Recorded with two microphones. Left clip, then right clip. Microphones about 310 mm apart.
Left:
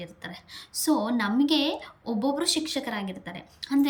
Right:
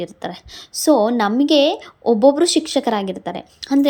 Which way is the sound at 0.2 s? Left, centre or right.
Centre.